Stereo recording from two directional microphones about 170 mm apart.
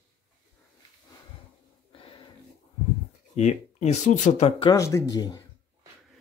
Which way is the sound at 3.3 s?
40° left (ahead or behind).